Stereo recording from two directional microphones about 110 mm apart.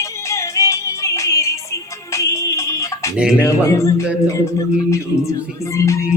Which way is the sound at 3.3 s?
25° left (ahead or behind).